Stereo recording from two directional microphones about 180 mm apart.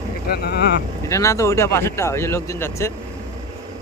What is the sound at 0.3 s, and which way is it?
Speech, 60° left (ahead or behind).